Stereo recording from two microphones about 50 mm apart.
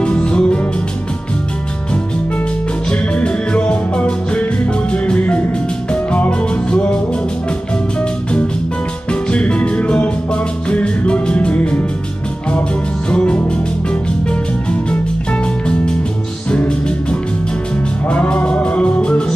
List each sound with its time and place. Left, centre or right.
0.0 s music: left
2.9 s music: left
8.0 s music: left
13.1 s music: left